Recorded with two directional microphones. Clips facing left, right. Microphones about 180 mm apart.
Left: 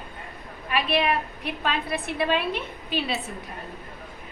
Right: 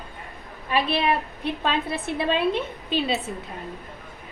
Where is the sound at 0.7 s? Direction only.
30° right (ahead or behind).